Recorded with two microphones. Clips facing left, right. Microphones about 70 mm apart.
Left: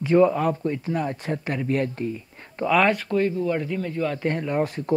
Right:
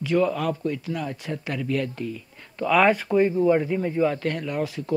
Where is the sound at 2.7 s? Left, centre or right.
Centre.